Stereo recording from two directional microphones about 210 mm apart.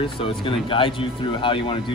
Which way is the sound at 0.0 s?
25° left (ahead or behind).